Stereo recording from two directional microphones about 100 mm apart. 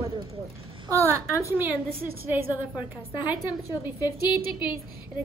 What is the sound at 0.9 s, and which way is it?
A woman's voice, 30° right (ahead or behind).